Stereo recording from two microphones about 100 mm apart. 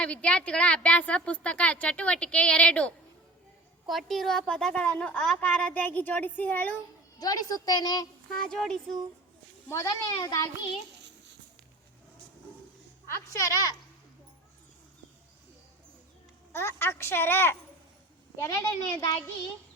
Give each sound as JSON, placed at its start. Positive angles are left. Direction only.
{"t": 0.0, "sound": "a woman's voice", "side_deg": 10}
{"t": 3.8, "sound": "a woman's voice", "side_deg": 0}
{"t": 7.2, "sound": "a child's voice", "side_deg": 40}
{"t": 8.3, "sound": "a woman's voice", "side_deg": 5}
{"t": 9.6, "sound": "a child's voice", "side_deg": 30}
{"t": 13.1, "sound": "a child's voice", "side_deg": 30}
{"t": 16.5, "sound": "a woman's voice", "side_deg": 25}